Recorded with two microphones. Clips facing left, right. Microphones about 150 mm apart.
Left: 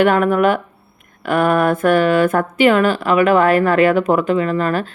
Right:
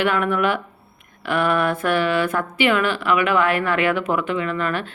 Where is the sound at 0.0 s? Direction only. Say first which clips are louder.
Left 7 dB; 45° left (ahead or behind).